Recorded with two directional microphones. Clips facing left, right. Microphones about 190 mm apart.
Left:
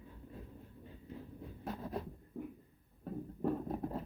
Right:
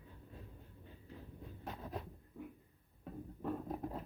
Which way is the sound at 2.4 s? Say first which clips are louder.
Left 5 dB; 40° left (ahead or behind).